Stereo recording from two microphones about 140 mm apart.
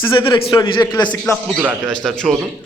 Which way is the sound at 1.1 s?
10° left (ahead or behind).